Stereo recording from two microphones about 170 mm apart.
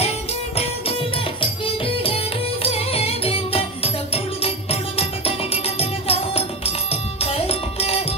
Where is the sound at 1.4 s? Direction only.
30° left (ahead or behind).